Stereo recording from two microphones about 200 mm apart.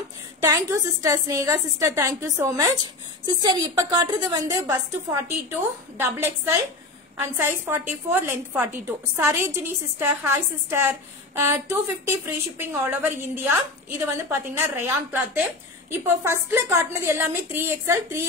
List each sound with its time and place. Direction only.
0.4 s a woman's voice: 15° right (ahead or behind)